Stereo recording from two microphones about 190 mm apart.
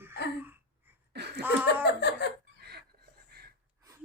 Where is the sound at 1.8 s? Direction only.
60° left (ahead or behind).